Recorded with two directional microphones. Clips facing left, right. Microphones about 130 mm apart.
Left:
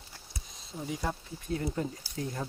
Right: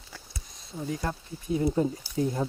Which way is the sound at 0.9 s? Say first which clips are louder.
Right 2 dB; 5° left (ahead or behind).